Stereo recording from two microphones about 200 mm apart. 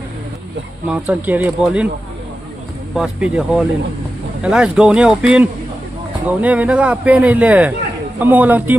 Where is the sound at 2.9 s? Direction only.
5° right (ahead or behind).